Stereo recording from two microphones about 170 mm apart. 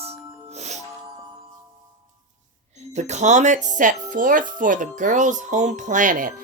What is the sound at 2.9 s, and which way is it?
Speech, 40° right (ahead or behind).